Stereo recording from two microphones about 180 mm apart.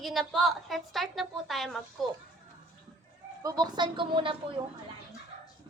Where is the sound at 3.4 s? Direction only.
20° right (ahead or behind).